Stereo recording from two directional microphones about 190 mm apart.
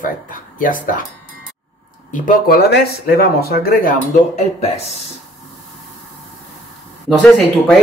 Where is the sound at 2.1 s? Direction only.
45° left (ahead or behind).